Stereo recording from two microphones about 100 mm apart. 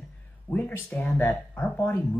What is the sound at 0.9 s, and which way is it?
Speech, 20° left (ahead or behind).